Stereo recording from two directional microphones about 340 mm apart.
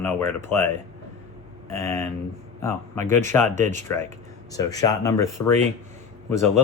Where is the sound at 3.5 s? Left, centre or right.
Right.